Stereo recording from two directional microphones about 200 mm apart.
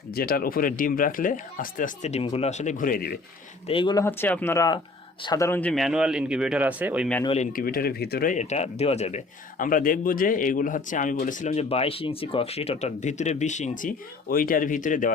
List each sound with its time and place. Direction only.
0.1 s speech: 50° left (ahead or behind)
3.7 s speech: 25° left (ahead or behind); by 7.1 s 5° right (ahead or behind)
7.5 s speech: 45° left (ahead or behind)